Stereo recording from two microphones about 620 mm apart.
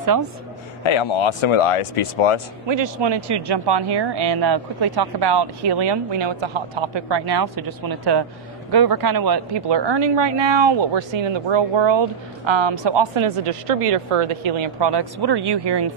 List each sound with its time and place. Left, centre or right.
0.0 s speech: right
0.8 s speech: left
2.7 s speech: right